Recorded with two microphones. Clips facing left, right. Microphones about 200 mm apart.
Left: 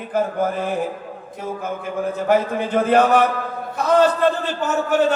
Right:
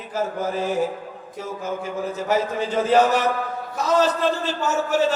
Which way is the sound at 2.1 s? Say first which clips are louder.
Left 4 dB; 55° left (ahead or behind).